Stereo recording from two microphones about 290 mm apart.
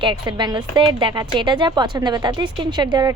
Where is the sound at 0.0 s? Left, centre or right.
Centre.